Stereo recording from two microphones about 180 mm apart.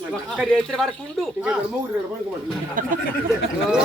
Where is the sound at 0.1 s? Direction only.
Centre (ahead or behind).